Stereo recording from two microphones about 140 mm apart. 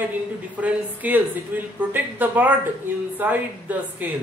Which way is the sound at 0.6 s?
10° right (ahead or behind).